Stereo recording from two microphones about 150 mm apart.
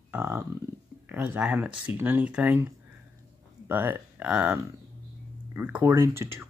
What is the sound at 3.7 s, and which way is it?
Speech, 10° right (ahead or behind).